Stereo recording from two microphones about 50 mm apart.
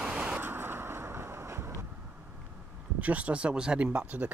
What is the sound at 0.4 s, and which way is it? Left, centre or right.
Vehicle, right.